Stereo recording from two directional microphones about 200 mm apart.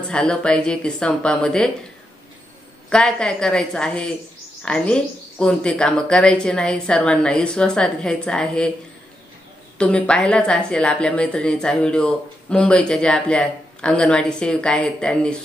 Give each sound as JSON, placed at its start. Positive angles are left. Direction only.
{"t": 0.1, "sound": "a woman's voice", "side_deg": 5}
{"t": 2.9, "sound": "a woman's voice", "side_deg": 5}
{"t": 9.8, "sound": "a woman's voice", "side_deg": 5}